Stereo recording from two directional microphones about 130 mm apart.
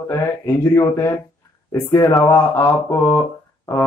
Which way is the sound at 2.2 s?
20° left (ahead or behind).